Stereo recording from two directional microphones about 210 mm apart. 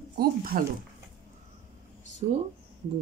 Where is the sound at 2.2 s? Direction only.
30° right (ahead or behind).